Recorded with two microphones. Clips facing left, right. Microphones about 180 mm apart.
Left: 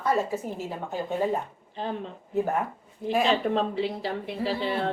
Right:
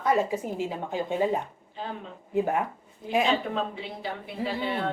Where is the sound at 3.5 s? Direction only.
35° left (ahead or behind).